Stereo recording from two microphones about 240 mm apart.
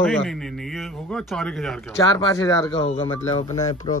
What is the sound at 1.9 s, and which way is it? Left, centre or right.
Speech, centre.